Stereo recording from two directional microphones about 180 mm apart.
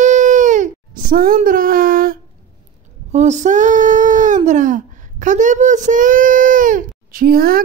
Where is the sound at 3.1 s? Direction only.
40° right (ahead or behind).